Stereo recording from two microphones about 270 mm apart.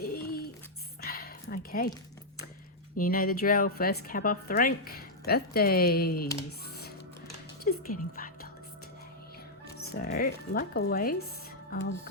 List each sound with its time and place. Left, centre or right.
0.0 s a sound: left
3.0 s a woman's voice: left
7.6 s speech: left
9.7 s a woman's voice: left